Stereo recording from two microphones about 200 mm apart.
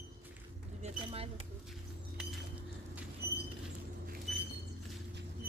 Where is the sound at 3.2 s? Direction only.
55° right (ahead or behind).